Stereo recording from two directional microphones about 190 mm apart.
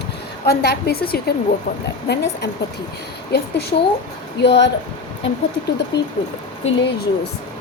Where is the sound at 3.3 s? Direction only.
60° left (ahead or behind).